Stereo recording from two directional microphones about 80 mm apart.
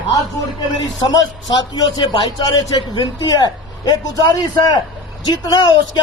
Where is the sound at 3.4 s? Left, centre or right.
Left.